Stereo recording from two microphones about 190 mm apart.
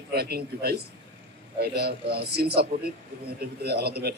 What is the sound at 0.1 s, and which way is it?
A man's voice, 55° right (ahead or behind).